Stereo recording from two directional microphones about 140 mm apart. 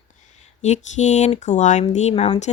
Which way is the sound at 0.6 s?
55° left (ahead or behind).